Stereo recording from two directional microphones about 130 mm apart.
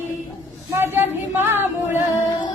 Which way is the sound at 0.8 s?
15° right (ahead or behind).